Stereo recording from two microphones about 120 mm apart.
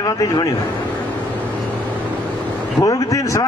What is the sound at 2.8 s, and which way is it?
Speech, 25° left (ahead or behind).